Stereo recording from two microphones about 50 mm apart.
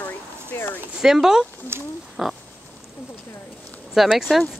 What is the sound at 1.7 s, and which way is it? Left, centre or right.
Speech, right.